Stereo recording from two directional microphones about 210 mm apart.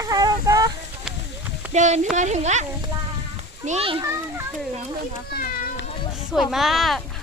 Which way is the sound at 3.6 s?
30° right (ahead or behind).